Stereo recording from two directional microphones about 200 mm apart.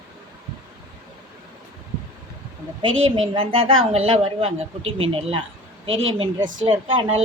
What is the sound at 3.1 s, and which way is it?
A woman's voice, 25° right (ahead or behind).